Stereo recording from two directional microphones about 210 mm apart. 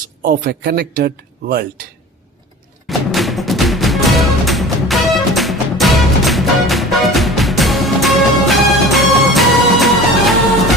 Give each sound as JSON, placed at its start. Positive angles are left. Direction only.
{"t": 0.2, "sound": "speech", "side_deg": -45}
{"t": 2.8, "sound": "music", "side_deg": 0}